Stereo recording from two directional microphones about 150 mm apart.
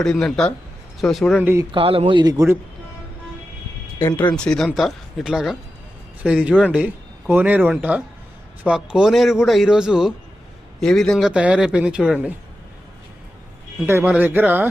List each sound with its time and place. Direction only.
0.0 s a man's voice: 5° left (ahead or behind)
1.4 s speech: 15° right (ahead or behind)
1.7 s a man's voice: 40° right (ahead or behind)
3.9 s a man's voice: 15° left (ahead or behind); by 12.3 s 5° right (ahead or behind)
13.8 s speech: 15° right (ahead or behind)